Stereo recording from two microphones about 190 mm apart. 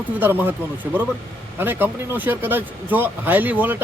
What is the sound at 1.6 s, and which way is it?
Speech, 10° right (ahead or behind).